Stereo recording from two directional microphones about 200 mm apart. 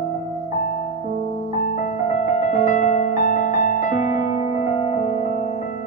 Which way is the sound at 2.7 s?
40° left (ahead or behind).